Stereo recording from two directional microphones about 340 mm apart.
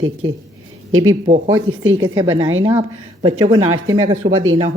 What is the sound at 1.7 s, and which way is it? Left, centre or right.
Speech, right.